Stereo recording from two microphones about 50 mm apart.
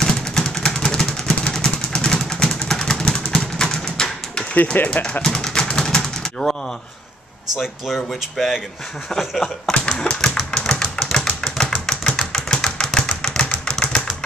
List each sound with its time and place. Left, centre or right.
0.0 s vehicle: centre
2.4 s a sound: centre
4.7 s speech: left
5.2 s pigeon: centre
7.5 s speech: centre
9.7 s typewriter: centre
10.7 s a sound: centre